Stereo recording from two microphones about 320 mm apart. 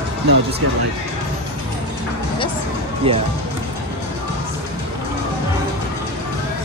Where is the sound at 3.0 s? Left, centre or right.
Centre.